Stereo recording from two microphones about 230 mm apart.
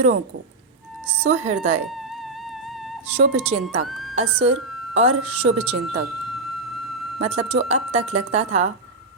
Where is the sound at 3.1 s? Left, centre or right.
Right.